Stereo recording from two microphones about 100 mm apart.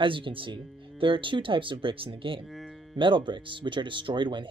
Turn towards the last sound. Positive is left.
turn(degrees=-50)  # may be behind; listen again after turning